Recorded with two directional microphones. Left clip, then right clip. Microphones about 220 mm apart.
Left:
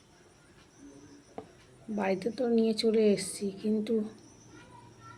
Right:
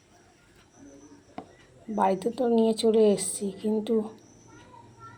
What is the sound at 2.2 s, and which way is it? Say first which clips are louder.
Speech: right 4 dB; 10° right (ahead or behind).